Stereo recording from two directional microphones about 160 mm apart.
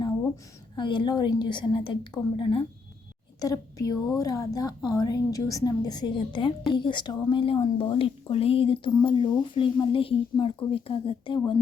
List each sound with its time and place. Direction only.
0.8 s a woman's voice: 30° left (ahead or behind)
3.4 s a woman's voice: 20° left (ahead or behind)